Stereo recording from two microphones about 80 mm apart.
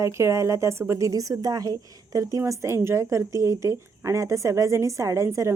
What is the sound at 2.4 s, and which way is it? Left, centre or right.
A woman's voice, right.